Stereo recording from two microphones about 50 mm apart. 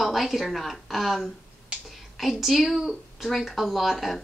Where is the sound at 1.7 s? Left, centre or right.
Centre.